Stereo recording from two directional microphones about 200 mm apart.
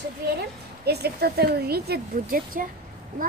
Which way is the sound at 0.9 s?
55° right (ahead or behind).